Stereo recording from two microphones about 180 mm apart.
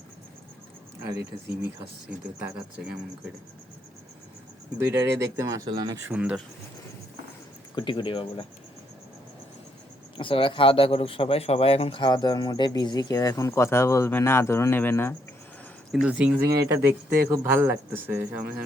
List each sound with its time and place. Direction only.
1.1 s speech: 60° right (ahead or behind)
2.0 s speech: 5° right (ahead or behind)
4.8 s speech: 15° right (ahead or behind)
6.1 s speech: 5° right (ahead or behind)
7.8 s a man's voice: 25° left (ahead or behind)
10.2 s a man's voice: 30° left (ahead or behind); by 15.1 s 10° left (ahead or behind)
15.9 s speech: 5° right (ahead or behind)